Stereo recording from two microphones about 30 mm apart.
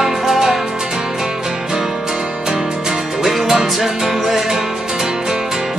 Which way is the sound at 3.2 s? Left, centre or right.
Centre.